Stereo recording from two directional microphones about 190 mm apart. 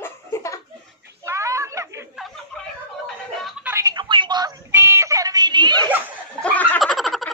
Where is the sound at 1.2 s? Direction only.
15° right (ahead or behind).